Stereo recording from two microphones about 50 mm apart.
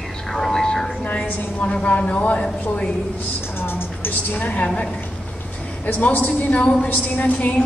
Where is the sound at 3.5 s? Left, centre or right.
Left.